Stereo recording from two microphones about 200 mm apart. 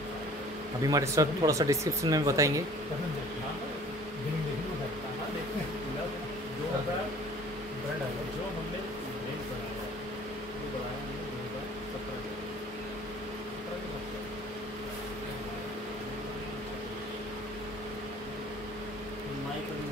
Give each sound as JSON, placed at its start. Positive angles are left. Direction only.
{"t": 0.8, "sound": "speech", "side_deg": -15}